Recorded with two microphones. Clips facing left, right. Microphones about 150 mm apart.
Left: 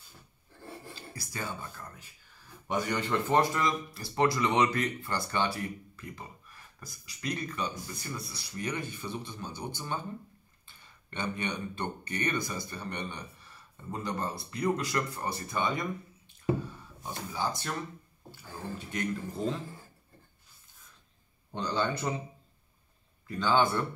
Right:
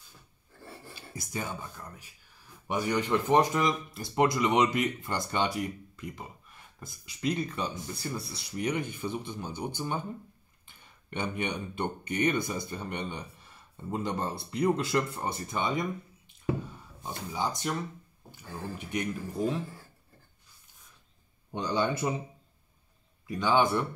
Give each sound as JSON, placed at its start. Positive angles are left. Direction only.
{"t": 1.2, "sound": "speech", "side_deg": -15}
{"t": 8.5, "sound": "speech", "side_deg": -15}
{"t": 17.0, "sound": "speech", "side_deg": -15}
{"t": 21.5, "sound": "speech", "side_deg": -15}
{"t": 23.2, "sound": "speech", "side_deg": -15}